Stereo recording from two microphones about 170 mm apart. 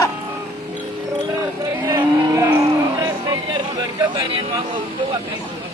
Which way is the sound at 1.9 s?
20° right (ahead or behind).